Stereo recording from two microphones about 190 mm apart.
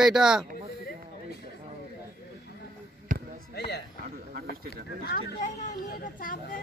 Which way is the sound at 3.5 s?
60° left (ahead or behind).